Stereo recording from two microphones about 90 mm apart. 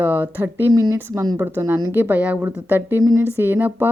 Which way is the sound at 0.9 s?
35° right (ahead or behind).